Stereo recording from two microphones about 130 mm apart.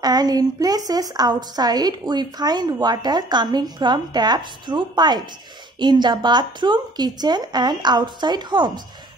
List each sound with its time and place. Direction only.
0.0 s a woman's voice: 30° right (ahead or behind)